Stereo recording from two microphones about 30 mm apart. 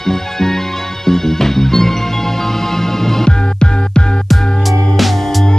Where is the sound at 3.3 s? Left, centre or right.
Left.